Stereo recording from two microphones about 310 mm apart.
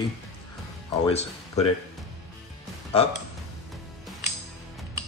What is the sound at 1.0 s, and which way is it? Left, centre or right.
Speech, centre.